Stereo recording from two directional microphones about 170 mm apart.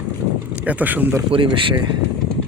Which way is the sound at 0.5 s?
10° right (ahead or behind).